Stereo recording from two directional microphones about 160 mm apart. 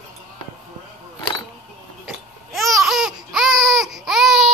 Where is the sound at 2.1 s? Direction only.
Centre (ahead or behind).